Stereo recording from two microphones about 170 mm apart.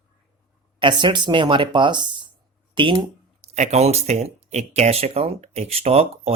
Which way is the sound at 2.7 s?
30° right (ahead or behind).